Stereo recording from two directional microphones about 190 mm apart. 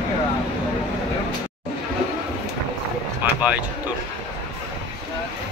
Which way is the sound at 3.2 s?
10° right (ahead or behind).